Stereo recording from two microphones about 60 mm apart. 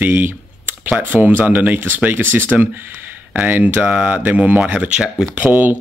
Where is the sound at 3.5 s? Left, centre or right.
Right.